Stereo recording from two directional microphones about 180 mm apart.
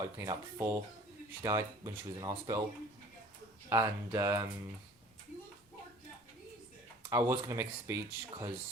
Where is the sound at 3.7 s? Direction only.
15° right (ahead or behind).